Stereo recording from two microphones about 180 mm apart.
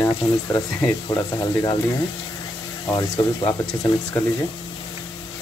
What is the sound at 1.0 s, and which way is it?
Speech, 20° left (ahead or behind).